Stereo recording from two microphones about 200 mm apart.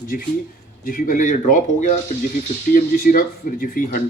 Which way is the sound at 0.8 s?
45° left (ahead or behind).